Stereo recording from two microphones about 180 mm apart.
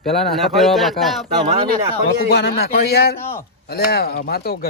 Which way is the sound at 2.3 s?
65° left (ahead or behind).